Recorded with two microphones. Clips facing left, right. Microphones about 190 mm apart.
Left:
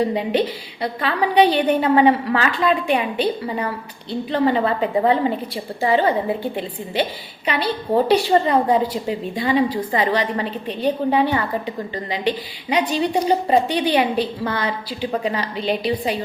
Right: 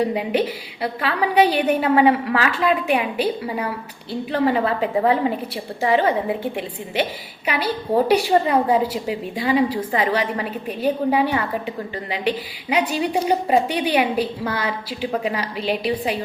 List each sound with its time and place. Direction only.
0.0 s a woman's voice: 10° right (ahead or behind)
6.4 s a woman's voice: 30° left (ahead or behind)
7.4 s a woman's voice: 5° right (ahead or behind)
12.9 s a woman's voice: 10° right (ahead or behind)